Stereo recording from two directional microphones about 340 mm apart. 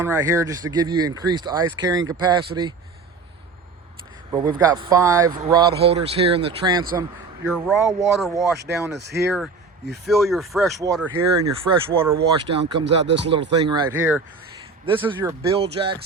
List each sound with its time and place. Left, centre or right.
0.0 s speech: centre
4.3 s speech: centre
7.4 s speech: centre
9.0 s speech: right
9.2 s speech: centre
12.5 s speech: right
12.8 s speech: right
13.5 s speech: centre